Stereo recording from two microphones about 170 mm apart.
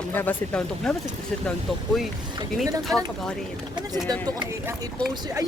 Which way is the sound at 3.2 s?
5° left (ahead or behind).